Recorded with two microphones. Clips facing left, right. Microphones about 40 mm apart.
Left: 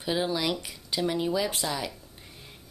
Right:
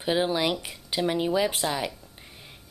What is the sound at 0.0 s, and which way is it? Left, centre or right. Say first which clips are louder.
Speech: right 3 dB; right.